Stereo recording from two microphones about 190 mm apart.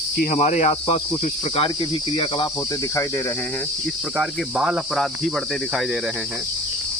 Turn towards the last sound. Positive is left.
turn(degrees=0)  # may be behind; listen again after turning